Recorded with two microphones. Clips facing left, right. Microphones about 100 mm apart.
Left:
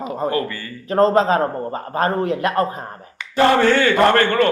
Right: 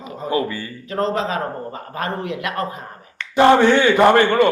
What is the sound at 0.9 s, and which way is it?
A man's voice, 40° left (ahead or behind).